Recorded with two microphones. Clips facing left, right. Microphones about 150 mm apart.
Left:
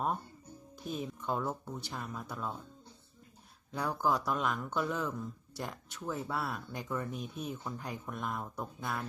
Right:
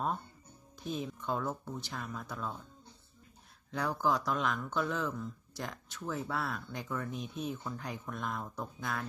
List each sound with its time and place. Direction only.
0.9 s speech: 5° left (ahead or behind)
3.7 s speech: 5° left (ahead or behind)